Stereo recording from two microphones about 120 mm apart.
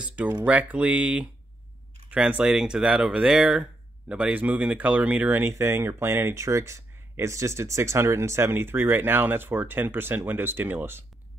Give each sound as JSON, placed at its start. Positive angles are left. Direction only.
{"t": 0.0, "sound": "speech", "side_deg": -10}